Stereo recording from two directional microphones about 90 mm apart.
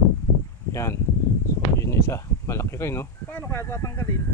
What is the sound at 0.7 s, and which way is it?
Speech, 35° left (ahead or behind).